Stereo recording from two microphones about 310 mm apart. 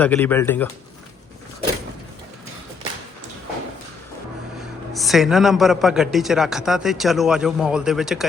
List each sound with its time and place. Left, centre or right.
0.0 s a man's voice: centre
4.9 s a man's voice: centre